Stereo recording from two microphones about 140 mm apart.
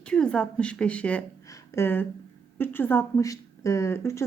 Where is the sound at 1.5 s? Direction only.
15° left (ahead or behind).